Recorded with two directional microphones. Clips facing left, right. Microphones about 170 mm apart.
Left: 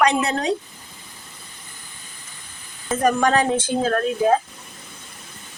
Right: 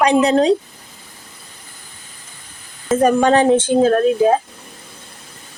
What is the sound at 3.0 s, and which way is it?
Speech, 25° right (ahead or behind).